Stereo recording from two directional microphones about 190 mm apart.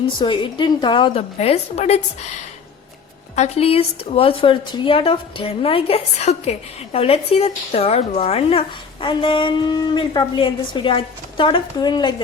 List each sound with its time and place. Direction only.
0.2 s a woman's voice: 25° left (ahead or behind)
3.3 s a woman's voice: 35° left (ahead or behind)